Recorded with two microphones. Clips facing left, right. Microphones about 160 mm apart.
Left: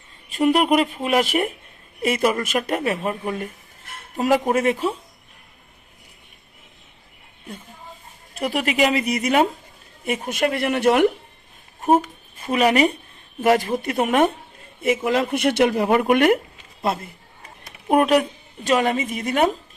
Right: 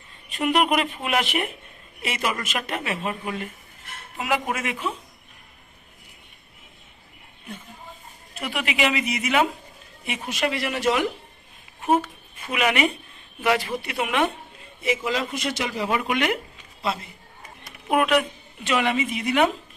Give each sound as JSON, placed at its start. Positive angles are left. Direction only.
{"t": 0.3, "sound": "a woman's voice", "side_deg": 40}
{"t": 8.4, "sound": "a woman's voice", "side_deg": 40}
{"t": 11.8, "sound": "a woman's voice", "side_deg": 45}
{"t": 17.8, "sound": "a woman's voice", "side_deg": 40}